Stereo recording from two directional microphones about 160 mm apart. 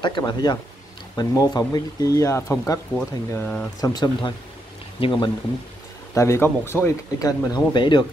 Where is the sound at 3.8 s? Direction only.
25° left (ahead or behind).